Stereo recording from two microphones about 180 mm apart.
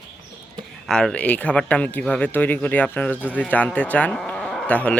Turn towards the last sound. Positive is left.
turn(degrees=5)  # may be behind; listen again after turning